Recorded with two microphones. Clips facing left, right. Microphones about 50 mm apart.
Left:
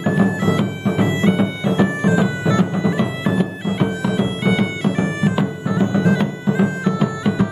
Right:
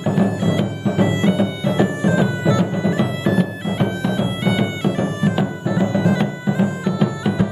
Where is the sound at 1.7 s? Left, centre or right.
Centre.